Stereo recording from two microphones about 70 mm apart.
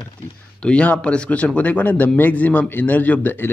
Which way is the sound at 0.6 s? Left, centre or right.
Centre.